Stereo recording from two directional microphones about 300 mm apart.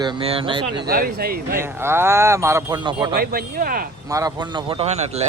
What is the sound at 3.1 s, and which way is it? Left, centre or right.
Speech, right.